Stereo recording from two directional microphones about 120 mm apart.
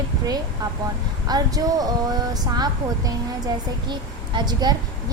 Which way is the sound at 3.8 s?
40° right (ahead or behind).